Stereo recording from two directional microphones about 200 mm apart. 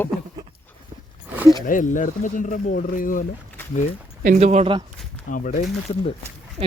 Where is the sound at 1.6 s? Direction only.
40° left (ahead or behind).